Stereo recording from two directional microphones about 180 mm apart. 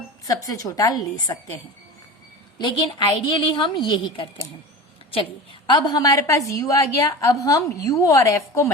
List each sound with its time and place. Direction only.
0.3 s a woman's voice: 20° left (ahead or behind)
2.6 s a woman's voice: 25° left (ahead or behind)
5.6 s a woman's voice: 25° left (ahead or behind)